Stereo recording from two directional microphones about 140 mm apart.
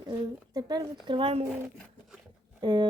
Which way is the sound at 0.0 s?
30° right (ahead or behind).